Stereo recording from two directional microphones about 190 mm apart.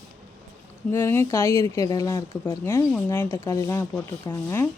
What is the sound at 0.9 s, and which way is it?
Speech, 15° left (ahead or behind).